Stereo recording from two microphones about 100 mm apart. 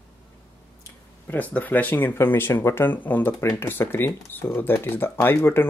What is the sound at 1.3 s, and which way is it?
Speech, 15° left (ahead or behind).